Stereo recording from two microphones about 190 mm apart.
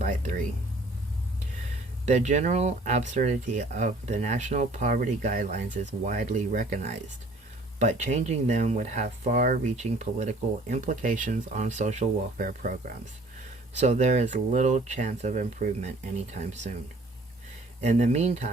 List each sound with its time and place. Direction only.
0.0 s vehicle: 40° right (ahead or behind)
2.0 s speech: 40° right (ahead or behind)
13.7 s speech: 40° right (ahead or behind)
17.7 s speech: 35° right (ahead or behind)